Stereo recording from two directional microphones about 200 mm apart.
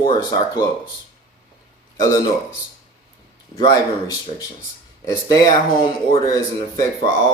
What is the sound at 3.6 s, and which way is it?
Speech, 20° left (ahead or behind).